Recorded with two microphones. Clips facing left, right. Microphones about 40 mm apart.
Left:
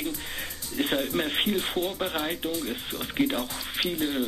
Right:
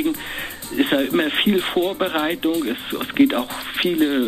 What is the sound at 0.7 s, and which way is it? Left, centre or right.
Speech, right.